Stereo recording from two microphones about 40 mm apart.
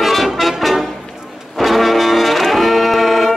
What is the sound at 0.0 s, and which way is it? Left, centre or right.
Music, centre.